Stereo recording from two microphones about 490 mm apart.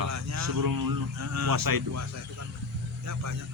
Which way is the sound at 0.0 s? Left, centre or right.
Right.